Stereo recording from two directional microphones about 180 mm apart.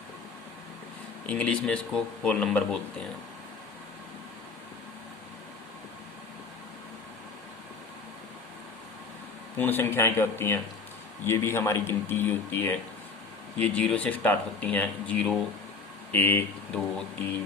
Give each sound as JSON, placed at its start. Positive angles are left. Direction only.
{"t": 1.3, "sound": "speech", "side_deg": 5}
{"t": 9.6, "sound": "speech", "side_deg": 10}